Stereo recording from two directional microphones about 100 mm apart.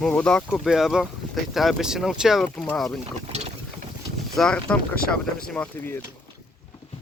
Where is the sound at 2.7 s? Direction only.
Centre (ahead or behind).